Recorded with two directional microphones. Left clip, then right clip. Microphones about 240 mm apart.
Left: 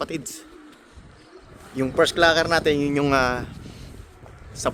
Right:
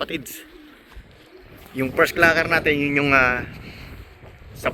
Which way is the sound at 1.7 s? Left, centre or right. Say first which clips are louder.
Right 1 dB; centre.